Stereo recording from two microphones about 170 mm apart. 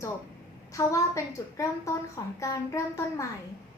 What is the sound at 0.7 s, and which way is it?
A child's voice, 20° left (ahead or behind).